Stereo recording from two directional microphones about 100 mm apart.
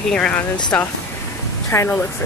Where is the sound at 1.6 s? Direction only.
25° left (ahead or behind).